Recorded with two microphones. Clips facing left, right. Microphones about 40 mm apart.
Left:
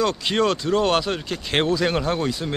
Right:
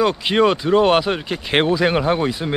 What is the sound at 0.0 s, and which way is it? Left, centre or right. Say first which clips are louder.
A man's voice: right 5 dB; centre.